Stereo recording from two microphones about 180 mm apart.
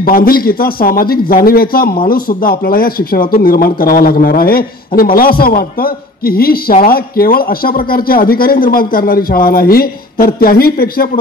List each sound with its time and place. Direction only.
0.0 s speech: 55° left (ahead or behind)